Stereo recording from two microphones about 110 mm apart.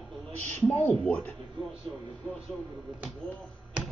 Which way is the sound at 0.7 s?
15° left (ahead or behind).